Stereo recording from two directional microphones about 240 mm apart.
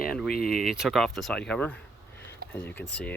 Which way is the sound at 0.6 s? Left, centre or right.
Centre.